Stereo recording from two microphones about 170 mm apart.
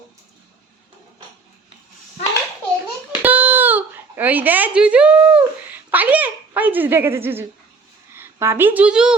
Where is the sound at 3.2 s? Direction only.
10° right (ahead or behind).